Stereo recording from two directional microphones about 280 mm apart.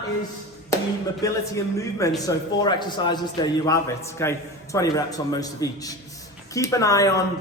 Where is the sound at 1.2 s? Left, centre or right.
Centre.